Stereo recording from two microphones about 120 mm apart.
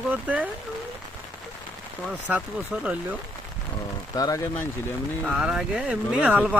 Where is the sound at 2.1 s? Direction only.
15° right (ahead or behind).